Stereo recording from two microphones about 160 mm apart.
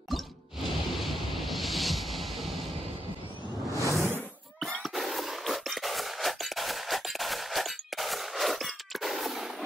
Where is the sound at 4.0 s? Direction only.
15° right (ahead or behind).